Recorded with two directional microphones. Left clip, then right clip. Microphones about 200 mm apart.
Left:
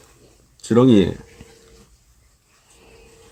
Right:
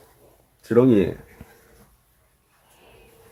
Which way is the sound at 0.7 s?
55° left (ahead or behind).